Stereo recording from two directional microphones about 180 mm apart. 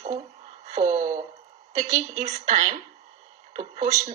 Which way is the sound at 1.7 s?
40° right (ahead or behind).